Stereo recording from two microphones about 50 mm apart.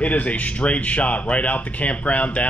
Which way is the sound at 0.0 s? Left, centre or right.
Left.